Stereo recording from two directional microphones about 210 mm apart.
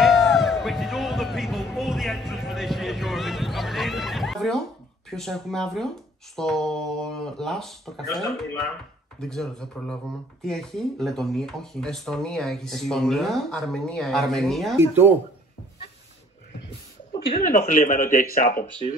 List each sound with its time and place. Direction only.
0.0 s music: centre (ahead or behind)
5.1 s speech: centre (ahead or behind)
9.3 s speech: 5° left (ahead or behind)
14.8 s speech: 10° right (ahead or behind)
17.3 s speech: 40° left (ahead or behind)